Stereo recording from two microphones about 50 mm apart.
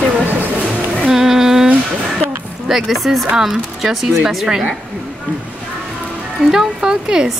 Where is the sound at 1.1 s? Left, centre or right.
Centre.